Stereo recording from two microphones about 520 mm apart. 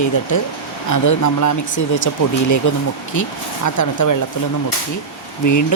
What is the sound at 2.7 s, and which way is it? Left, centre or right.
Speech, left.